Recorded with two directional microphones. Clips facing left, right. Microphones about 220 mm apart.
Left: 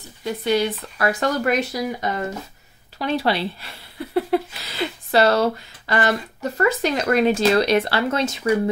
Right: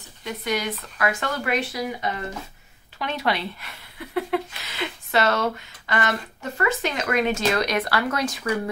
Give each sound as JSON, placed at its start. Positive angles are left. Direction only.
{"t": 0.2, "sound": "speech", "side_deg": 30}